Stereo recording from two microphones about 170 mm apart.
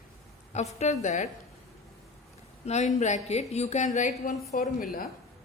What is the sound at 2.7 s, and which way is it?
A woman's voice, 40° left (ahead or behind).